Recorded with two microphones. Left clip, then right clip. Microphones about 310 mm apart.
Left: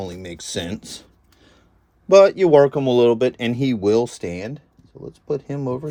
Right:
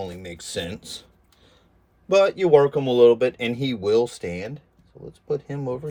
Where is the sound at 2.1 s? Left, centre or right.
Left.